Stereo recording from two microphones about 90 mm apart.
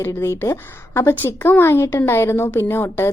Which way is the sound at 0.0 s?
35° left (ahead or behind).